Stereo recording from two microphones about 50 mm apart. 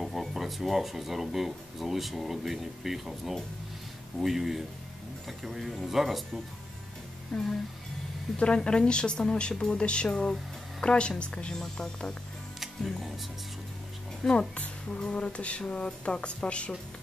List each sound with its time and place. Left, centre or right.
0.0 s speech: centre
7.3 s a woman's voice: centre
8.4 s a woman's voice: centre
12.5 s music: centre
14.5 s a woman's voice: left